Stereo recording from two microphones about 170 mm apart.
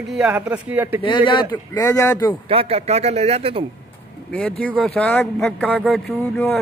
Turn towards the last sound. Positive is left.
turn(degrees=5)  # may be behind; listen again after turning